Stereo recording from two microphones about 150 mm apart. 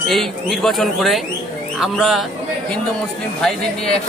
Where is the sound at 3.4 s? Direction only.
5° left (ahead or behind).